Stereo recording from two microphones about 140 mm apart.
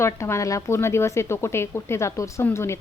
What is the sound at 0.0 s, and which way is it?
A woman's voice, 20° left (ahead or behind).